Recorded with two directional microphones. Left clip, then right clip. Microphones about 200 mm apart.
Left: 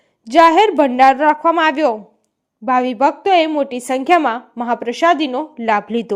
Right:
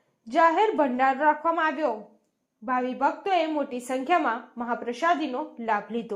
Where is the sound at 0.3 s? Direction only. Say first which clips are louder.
Left 11 dB; 40° left (ahead or behind).